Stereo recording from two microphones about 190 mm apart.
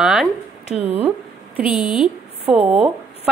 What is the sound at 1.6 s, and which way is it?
Speech, 5° right (ahead or behind).